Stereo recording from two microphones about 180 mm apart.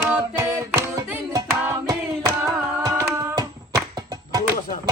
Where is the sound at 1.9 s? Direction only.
15° right (ahead or behind).